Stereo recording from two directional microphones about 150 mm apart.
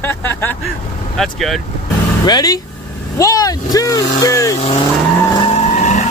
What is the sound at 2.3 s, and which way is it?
Speech, 25° left (ahead or behind).